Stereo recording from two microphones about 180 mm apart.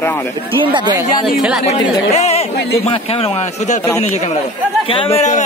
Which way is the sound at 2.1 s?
35° left (ahead or behind).